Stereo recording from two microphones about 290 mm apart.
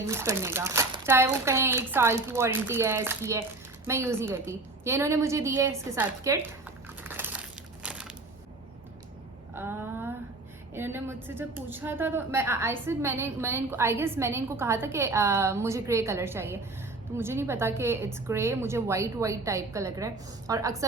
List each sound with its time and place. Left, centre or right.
0.1 s a woman's voice: centre
7.0 s crumpling: centre
9.6 s a sound: centre
10.8 s a woman's voice: centre